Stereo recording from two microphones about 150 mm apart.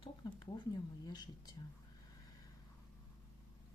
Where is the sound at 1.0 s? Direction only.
25° left (ahead or behind).